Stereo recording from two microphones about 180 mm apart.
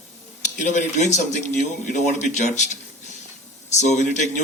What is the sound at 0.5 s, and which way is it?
Speech, 40° left (ahead or behind).